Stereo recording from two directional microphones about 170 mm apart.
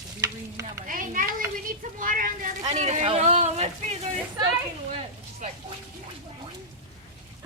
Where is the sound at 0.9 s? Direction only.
55° right (ahead or behind).